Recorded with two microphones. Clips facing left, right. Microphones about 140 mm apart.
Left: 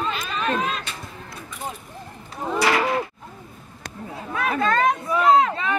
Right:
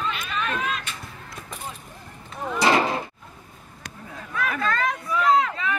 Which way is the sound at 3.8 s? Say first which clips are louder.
Left 5 dB; 30° left (ahead or behind).